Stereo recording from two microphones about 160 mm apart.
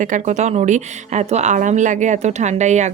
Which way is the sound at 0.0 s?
50° right (ahead or behind).